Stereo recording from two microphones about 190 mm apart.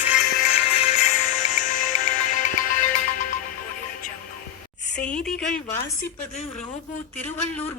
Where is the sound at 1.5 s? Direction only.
45° left (ahead or behind).